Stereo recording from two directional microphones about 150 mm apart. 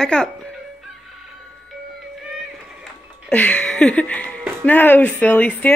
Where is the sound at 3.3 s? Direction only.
10° left (ahead or behind).